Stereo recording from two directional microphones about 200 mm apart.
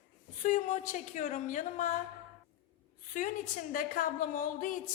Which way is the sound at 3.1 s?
40° left (ahead or behind).